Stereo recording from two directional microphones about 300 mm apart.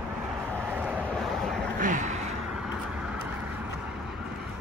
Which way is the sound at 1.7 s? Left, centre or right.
Right.